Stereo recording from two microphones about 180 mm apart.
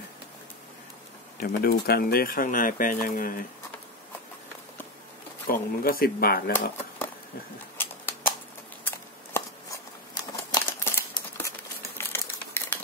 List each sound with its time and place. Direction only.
1.4 s speech: 55° left (ahead or behind)
5.5 s speech: 55° left (ahead or behind)
7.7 s typewriter: 10° left (ahead or behind)
8.8 s shuffling cards: 15° left (ahead or behind)
10.5 s a sound: 15° left (ahead or behind)
12.0 s typewriter: 15° left (ahead or behind)